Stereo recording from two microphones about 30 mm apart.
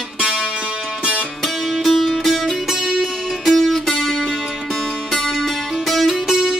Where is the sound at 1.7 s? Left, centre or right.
Centre.